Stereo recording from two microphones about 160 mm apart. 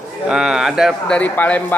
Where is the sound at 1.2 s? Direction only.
10° left (ahead or behind).